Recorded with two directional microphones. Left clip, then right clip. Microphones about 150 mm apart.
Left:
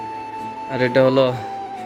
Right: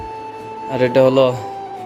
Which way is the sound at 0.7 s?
10° right (ahead or behind).